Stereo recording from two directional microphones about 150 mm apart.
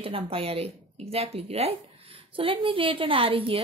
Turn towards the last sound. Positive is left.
turn(degrees=-40)  # may be behind; listen again after turning